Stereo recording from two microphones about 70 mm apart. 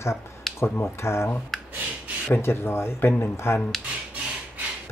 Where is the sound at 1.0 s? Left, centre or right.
Left.